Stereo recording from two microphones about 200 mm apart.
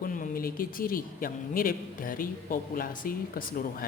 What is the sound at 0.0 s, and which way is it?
A man's voice, 45° left (ahead or behind).